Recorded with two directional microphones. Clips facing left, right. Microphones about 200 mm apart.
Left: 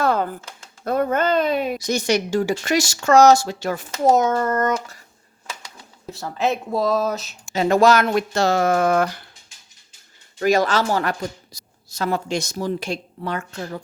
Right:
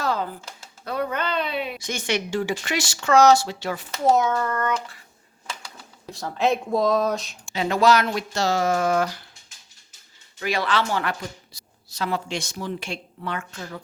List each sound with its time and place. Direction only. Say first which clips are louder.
0.0 s typing: left 5 dB; 55° left (ahead or behind)
0.9 s speech: left 7 dB; 45° left (ahead or behind)
6.1 s speech: even; centre (ahead or behind)
7.5 s speech: left 4 dB; 45° left (ahead or behind)
10.4 s a woman's voice: left 6 dB; 45° left (ahead or behind)